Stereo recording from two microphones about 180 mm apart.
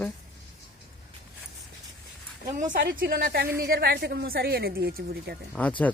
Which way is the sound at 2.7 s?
55° right (ahead or behind).